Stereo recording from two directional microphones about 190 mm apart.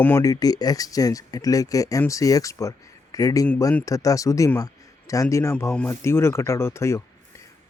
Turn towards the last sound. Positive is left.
turn(degrees=15)  # may be behind; listen again after turning